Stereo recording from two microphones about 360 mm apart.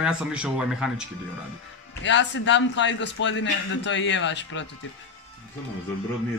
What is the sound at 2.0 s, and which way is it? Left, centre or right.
A man's voice, left.